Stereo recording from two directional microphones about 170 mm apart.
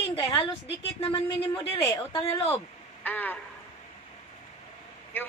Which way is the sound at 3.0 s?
10° left (ahead or behind).